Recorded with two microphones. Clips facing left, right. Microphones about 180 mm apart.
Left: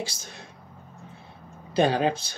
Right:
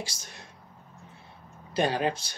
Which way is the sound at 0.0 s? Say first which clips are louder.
Left 5 dB; 30° left (ahead or behind).